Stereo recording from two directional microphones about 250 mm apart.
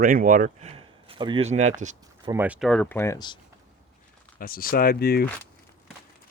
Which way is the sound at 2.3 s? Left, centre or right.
Centre.